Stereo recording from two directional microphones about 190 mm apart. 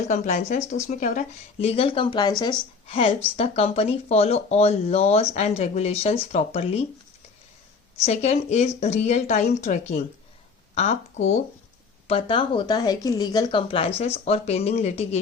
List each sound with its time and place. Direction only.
0.1 s speech: 40° left (ahead or behind)
1.6 s speech: 30° left (ahead or behind)
8.0 s speech: 35° left (ahead or behind)